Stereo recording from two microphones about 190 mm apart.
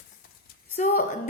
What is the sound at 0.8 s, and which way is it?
Speech, 40° left (ahead or behind).